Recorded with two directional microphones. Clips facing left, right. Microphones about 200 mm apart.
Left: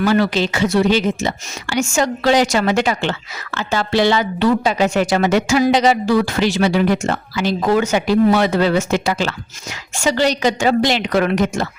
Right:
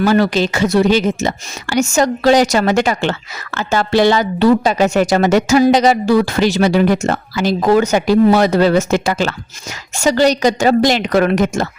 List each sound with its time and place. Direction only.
0.0 s a woman's voice: 45° right (ahead or behind)